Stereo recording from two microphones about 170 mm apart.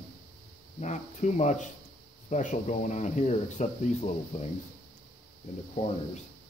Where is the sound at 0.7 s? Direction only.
45° left (ahead or behind).